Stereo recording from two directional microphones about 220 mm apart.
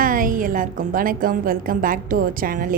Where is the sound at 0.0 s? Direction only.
40° right (ahead or behind).